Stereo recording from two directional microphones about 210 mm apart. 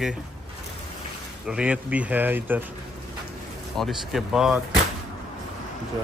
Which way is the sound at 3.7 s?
Centre (ahead or behind).